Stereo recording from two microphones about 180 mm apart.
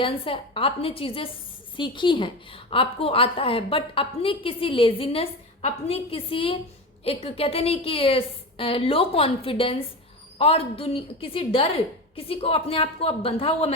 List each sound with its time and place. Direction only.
0.0 s a woman's voice: 30° left (ahead or behind)